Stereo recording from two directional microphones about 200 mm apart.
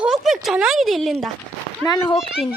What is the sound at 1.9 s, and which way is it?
Speech, 20° left (ahead or behind).